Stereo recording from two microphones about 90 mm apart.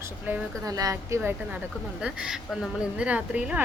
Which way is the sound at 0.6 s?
40° right (ahead or behind).